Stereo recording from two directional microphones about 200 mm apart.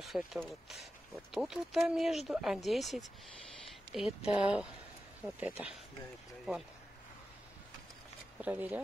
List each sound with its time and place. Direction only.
0.0 s speech: centre (ahead or behind)
8.4 s speech: 10° right (ahead or behind)